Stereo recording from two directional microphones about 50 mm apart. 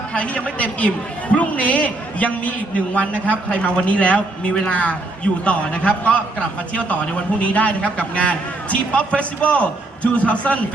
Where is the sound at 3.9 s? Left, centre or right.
Left.